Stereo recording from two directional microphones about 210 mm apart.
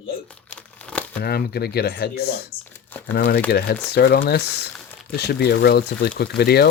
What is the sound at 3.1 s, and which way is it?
Speech, 45° left (ahead or behind).